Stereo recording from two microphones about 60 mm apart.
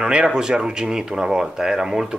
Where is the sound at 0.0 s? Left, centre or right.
Centre.